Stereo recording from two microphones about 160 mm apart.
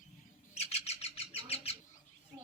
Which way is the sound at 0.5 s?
40° left (ahead or behind).